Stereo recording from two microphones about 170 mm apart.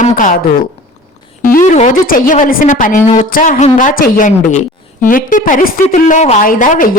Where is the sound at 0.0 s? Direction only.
50° left (ahead or behind).